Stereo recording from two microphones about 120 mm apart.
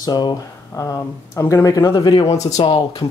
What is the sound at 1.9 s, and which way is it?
Speech, 45° left (ahead or behind).